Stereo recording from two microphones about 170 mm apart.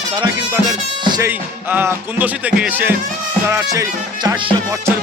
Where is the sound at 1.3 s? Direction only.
10° right (ahead or behind).